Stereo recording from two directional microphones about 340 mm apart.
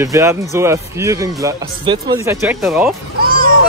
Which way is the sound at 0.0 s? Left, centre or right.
Centre.